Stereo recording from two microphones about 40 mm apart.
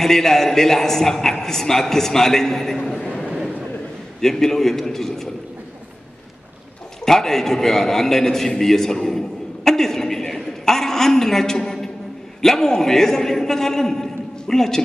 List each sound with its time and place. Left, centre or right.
0.0 s a man's voice: centre
2.9 s a sound: centre
4.2 s a man's voice: centre
7.1 s a man's voice: centre
9.7 s a sound: centre
12.4 s a man's voice: centre